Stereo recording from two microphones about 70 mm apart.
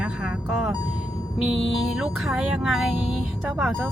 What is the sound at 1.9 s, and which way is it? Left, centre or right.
Speech, centre.